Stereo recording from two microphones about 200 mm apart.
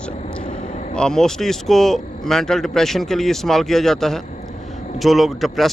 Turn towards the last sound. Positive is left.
turn(degrees=0)  # may be behind; listen again after turning